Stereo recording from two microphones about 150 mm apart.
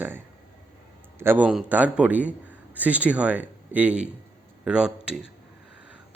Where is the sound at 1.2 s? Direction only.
15° right (ahead or behind).